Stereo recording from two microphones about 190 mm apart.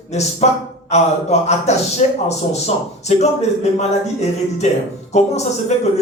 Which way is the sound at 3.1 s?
35° left (ahead or behind).